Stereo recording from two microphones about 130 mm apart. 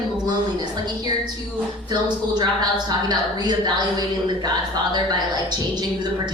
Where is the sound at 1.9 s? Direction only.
30° right (ahead or behind).